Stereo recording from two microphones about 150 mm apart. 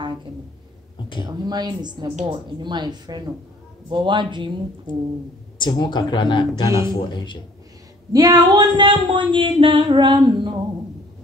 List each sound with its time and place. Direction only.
1.2 s speech: 25° right (ahead or behind)
5.6 s speech: 30° left (ahead or behind)
8.1 s speech: 25° right (ahead or behind)